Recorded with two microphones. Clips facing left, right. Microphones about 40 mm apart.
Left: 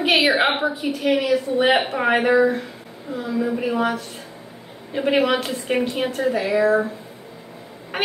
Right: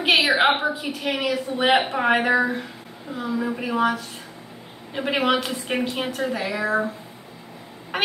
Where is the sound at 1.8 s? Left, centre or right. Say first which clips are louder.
Left 1 dB; centre.